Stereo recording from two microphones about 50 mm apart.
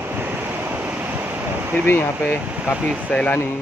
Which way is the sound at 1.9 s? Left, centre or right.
Left.